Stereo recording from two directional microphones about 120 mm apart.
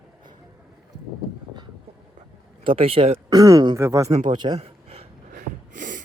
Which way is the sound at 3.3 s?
30° right (ahead or behind).